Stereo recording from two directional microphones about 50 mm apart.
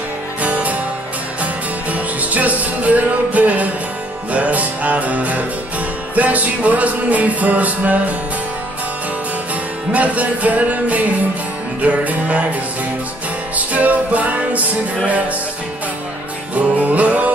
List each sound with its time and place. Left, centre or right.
0.4 s music: right
9.9 s music: right
13.6 s music: right
16.5 s music: right